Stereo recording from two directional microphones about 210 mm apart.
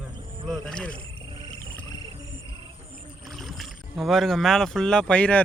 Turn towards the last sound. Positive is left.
turn(degrees=5)  # may be behind; listen again after turning